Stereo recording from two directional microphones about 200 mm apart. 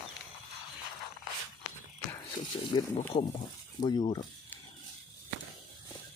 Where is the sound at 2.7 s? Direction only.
25° left (ahead or behind).